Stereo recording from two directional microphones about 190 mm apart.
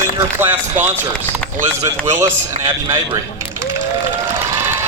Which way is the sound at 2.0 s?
15° right (ahead or behind).